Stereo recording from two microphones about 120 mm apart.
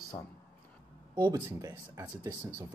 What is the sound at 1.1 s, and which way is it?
Speech, 35° right (ahead or behind).